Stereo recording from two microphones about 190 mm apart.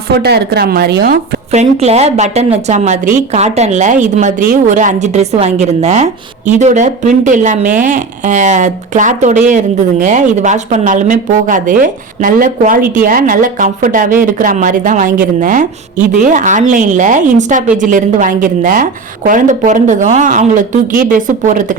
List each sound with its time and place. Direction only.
0.2 s speech: 55° right (ahead or behind)
1.5 s a woman's voice: 35° right (ahead or behind)